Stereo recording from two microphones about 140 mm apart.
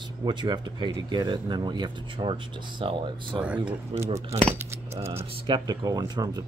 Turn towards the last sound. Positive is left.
turn(degrees=-30)  # may be behind; listen again after turning